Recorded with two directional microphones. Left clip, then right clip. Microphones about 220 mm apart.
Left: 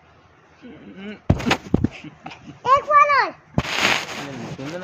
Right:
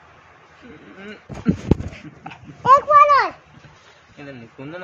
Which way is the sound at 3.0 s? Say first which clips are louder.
Right 3 dB; 15° right (ahead or behind).